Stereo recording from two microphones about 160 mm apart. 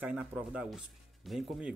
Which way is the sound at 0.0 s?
10° right (ahead or behind).